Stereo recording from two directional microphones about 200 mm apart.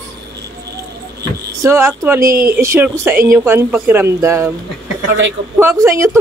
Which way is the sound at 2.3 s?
45° right (ahead or behind).